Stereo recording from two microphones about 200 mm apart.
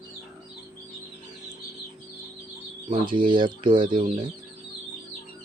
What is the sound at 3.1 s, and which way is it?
Speech, 25° right (ahead or behind).